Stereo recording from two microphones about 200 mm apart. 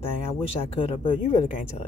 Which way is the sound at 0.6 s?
25° left (ahead or behind).